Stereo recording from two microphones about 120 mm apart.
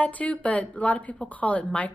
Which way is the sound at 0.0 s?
10° left (ahead or behind).